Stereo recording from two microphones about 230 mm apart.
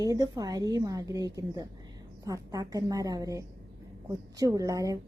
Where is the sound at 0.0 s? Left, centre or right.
Centre.